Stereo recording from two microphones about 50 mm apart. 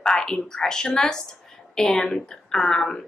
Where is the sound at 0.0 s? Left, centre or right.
Centre.